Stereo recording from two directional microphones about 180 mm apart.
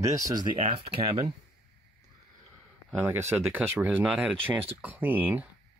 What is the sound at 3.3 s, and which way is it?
Speech, 10° right (ahead or behind).